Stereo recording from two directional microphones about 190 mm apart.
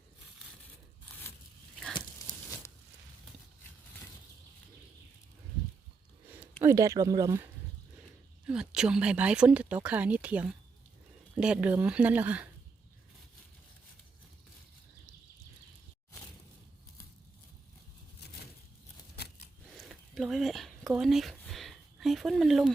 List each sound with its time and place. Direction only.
6.3 s speech: 10° right (ahead or behind)
8.4 s speech: 5° right (ahead or behind)
19.1 s scissors: 55° left (ahead or behind)
19.7 s a sound: centre (ahead or behind)